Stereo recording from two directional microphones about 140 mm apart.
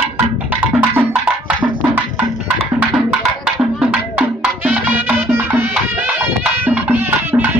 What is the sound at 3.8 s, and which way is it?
Music, 10° right (ahead or behind).